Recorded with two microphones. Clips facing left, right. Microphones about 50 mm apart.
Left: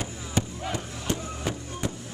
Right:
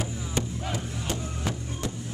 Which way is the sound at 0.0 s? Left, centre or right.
Centre.